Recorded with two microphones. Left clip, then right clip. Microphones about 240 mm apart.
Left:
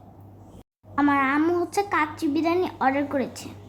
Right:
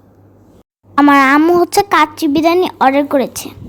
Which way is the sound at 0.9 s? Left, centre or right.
Right.